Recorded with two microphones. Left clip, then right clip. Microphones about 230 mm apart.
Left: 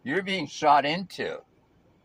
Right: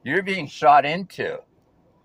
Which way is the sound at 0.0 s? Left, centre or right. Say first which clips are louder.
Right 5 dB; centre.